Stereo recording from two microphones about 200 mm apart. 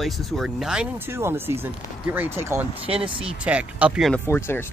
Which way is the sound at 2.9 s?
25° right (ahead or behind).